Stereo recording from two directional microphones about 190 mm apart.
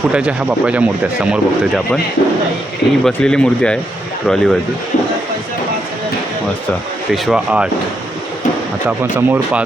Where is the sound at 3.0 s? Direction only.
5° left (ahead or behind).